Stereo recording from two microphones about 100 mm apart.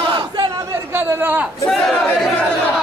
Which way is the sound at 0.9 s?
20° right (ahead or behind).